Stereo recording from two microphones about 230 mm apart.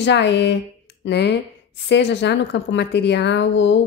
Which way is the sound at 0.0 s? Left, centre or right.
Left.